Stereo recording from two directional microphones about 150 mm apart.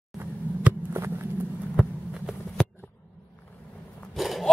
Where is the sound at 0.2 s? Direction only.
15° right (ahead or behind).